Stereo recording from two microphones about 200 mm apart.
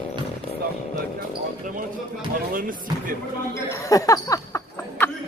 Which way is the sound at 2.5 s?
45° right (ahead or behind).